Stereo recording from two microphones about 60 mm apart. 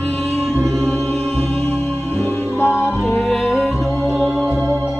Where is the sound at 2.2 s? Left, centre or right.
Left.